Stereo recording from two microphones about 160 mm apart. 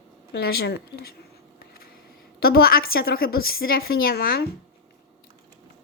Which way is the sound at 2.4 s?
70° left (ahead or behind).